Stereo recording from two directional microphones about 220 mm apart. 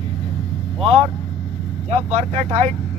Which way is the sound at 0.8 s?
25° right (ahead or behind).